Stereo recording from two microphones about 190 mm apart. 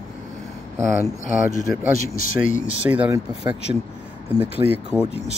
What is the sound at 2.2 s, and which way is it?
Speech, 45° left (ahead or behind).